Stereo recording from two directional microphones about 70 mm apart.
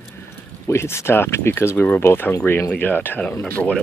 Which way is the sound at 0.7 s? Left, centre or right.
Left.